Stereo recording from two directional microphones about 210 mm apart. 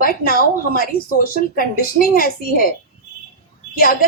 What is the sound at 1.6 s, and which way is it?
Speech, 45° left (ahead or behind).